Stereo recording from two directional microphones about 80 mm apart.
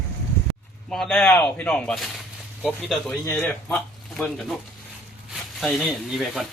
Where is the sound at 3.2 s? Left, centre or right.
Left.